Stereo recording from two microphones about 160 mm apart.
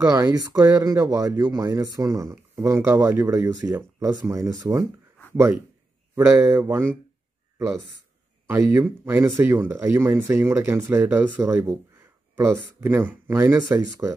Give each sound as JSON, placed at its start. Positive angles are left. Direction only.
{"t": 0.0, "sound": "speech", "side_deg": -20}
{"t": 8.5, "sound": "speech", "side_deg": -10}